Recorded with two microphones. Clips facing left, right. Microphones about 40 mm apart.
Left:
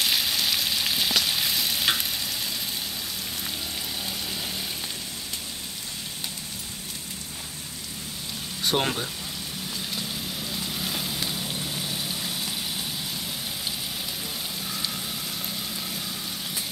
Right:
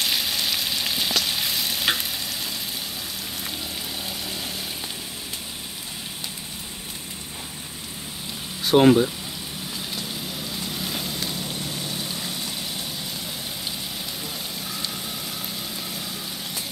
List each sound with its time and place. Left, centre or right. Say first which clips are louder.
0.0 s frying: even; centre
8.6 s speech: right 10 dB; centre
9.8 s vehicle: right 1 dB; centre